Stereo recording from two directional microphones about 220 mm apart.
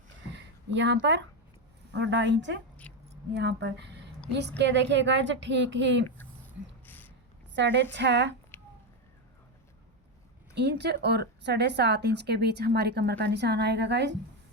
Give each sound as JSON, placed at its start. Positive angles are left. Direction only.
{"t": 0.3, "sound": "a woman's voice", "side_deg": -55}
{"t": 2.8, "sound": "keys jangling", "side_deg": 5}
{"t": 3.3, "sound": "a woman's voice", "side_deg": -50}
{"t": 6.8, "sound": "a sound", "side_deg": 10}
{"t": 7.5, "sound": "a woman's voice", "side_deg": -55}
{"t": 8.5, "sound": "a sound", "side_deg": 10}
{"t": 10.5, "sound": "a woman's voice", "side_deg": -50}